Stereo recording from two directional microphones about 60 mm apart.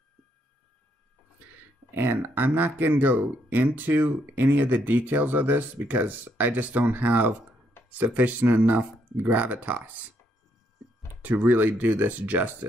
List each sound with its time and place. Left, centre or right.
2.0 s speech: right
11.2 s speech: right